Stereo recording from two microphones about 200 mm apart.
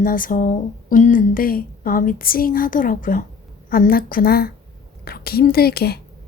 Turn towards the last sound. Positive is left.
turn(degrees=50)  # may be behind; listen again after turning